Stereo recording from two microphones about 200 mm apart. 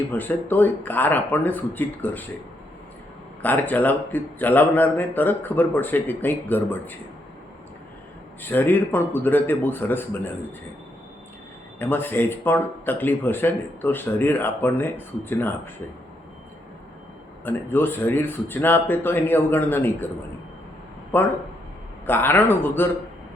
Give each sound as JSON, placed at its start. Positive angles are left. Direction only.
{"t": 0.1, "sound": "speech", "side_deg": 10}
{"t": 3.4, "sound": "speech", "side_deg": 10}
{"t": 8.4, "sound": "speech", "side_deg": 10}
{"t": 11.8, "sound": "speech", "side_deg": 10}
{"t": 17.4, "sound": "speech", "side_deg": 10}
{"t": 21.1, "sound": "speech", "side_deg": 10}